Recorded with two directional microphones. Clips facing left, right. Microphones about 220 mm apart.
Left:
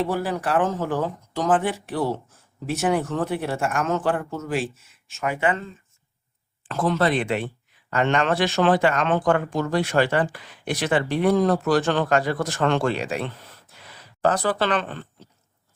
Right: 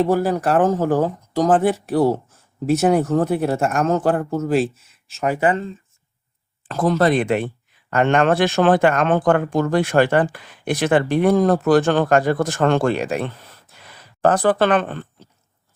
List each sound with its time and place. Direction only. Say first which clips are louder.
0.0 s speech: right 7 dB; 45° right (ahead or behind)
6.7 s speech: right 4 dB; 40° right (ahead or behind)